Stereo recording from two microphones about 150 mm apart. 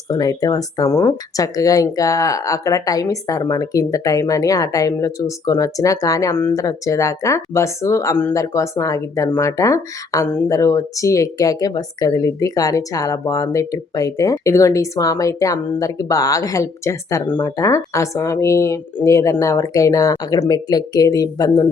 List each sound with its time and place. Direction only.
0.1 s speech: 25° left (ahead or behind)